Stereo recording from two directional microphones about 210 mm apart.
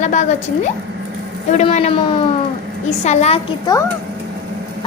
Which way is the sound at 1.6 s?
30° left (ahead or behind).